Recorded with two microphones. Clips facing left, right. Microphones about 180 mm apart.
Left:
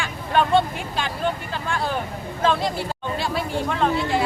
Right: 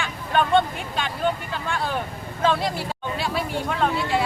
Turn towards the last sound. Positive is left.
turn(degrees=0)  # may be behind; listen again after turning